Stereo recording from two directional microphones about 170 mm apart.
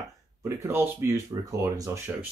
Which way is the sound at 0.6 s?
10° right (ahead or behind).